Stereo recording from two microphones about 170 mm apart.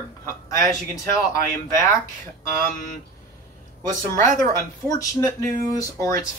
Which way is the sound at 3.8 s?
45° right (ahead or behind).